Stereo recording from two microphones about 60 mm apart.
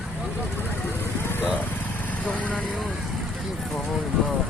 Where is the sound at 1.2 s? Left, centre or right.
Left.